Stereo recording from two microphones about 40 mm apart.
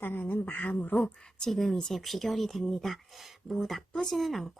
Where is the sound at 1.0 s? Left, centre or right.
Left.